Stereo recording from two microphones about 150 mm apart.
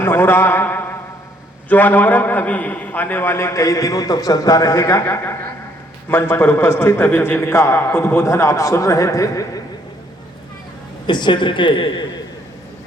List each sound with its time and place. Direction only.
0.0 s a sound: 15° left (ahead or behind)
1.7 s a man's voice: 10° left (ahead or behind)
11.0 s a man's voice: 30° left (ahead or behind)